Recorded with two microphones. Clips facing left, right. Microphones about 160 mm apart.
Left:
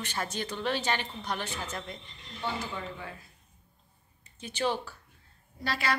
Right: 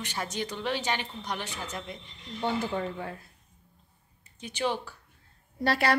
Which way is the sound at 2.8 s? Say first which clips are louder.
Right 6 dB; 45° right (ahead or behind).